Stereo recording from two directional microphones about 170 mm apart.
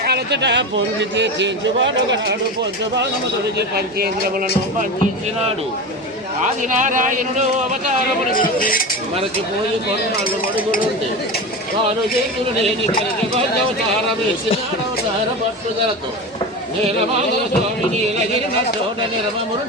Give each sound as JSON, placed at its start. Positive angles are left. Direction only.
{"t": 0.0, "sound": "a man's voice", "side_deg": -75}
{"t": 3.6, "sound": "speech", "side_deg": -65}
{"t": 6.4, "sound": "a man's voice", "side_deg": -50}
{"t": 8.3, "sound": "speech", "side_deg": 55}